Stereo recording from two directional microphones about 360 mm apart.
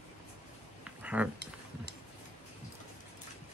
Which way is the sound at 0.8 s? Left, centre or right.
Centre.